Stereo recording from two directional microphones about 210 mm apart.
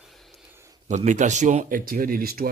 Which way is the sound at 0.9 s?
35° right (ahead or behind).